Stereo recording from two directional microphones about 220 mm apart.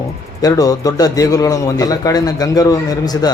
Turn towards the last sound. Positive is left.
turn(degrees=15)  # may be behind; listen again after turning